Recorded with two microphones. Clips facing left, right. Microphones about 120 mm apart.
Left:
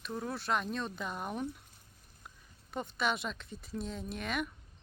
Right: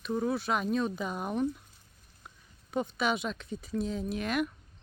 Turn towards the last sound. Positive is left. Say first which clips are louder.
# right 6 dB
turn(degrees=0)  # may be behind; listen again after turning